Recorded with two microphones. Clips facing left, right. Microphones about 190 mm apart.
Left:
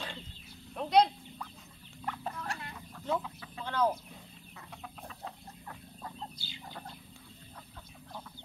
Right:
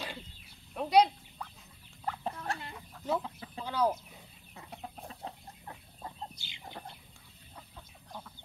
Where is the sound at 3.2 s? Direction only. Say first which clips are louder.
Right 2 dB; 30° right (ahead or behind).